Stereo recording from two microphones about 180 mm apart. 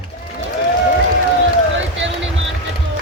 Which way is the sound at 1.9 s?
90° right.